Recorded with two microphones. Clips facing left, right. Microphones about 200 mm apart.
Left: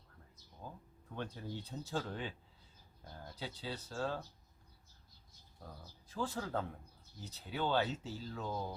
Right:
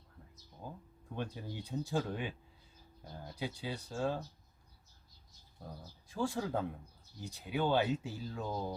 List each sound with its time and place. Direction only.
0.6 s a sound: 15° right (ahead or behind)
1.1 s speech: 10° right (ahead or behind)
3.3 s speech: 10° right (ahead or behind)
6.1 s speech: 10° right (ahead or behind)